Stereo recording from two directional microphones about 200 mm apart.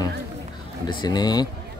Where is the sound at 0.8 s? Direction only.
20° left (ahead or behind).